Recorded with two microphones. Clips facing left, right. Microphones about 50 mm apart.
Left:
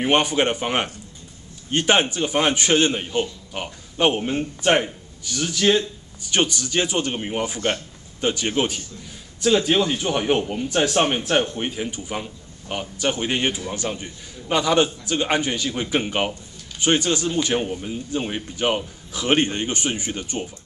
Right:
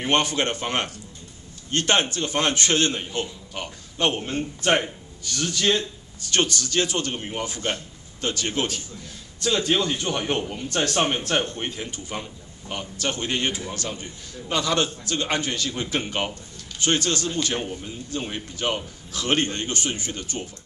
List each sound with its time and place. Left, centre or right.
0.0 s a man's voice: centre